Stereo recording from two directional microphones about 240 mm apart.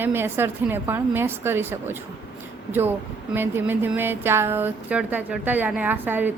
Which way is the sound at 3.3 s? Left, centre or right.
Centre.